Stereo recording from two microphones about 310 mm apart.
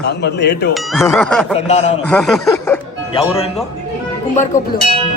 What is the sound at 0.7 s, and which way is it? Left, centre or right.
Speech, centre.